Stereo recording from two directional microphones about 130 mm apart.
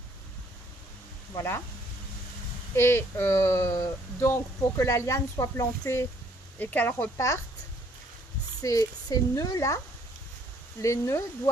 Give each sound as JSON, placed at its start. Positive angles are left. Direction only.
{"t": 1.4, "sound": "speech", "side_deg": 20}
{"t": 2.7, "sound": "speech", "side_deg": 20}
{"t": 8.6, "sound": "speech", "side_deg": 25}